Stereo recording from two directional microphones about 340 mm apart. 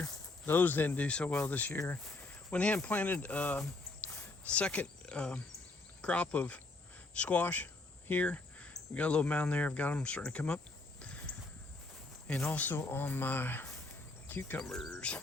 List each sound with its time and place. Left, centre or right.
0.0 s speech: centre
11.0 s a sound: centre
12.3 s speech: centre